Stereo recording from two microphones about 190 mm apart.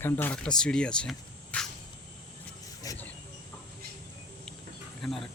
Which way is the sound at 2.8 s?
20° left (ahead or behind).